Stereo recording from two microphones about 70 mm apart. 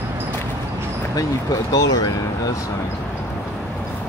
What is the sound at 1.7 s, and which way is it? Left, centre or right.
Speech, left.